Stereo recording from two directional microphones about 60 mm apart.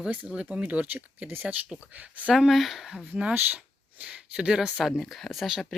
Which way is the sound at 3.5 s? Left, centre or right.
Centre.